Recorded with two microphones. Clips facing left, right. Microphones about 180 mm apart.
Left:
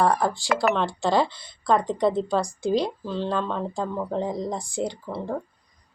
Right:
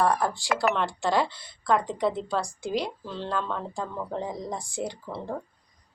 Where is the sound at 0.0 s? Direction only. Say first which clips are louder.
Left 2 dB; 15° left (ahead or behind).